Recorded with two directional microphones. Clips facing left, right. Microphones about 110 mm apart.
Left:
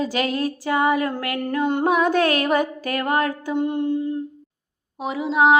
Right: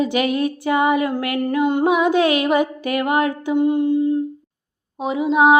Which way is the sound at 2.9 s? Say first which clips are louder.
Right 3 dB; 15° right (ahead or behind).